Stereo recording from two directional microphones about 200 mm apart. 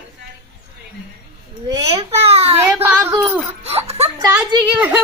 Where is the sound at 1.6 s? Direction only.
20° right (ahead or behind).